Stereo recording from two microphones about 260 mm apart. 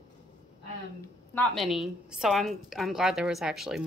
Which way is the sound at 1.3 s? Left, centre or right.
Centre.